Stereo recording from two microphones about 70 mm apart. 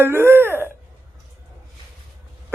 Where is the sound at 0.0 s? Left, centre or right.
Right.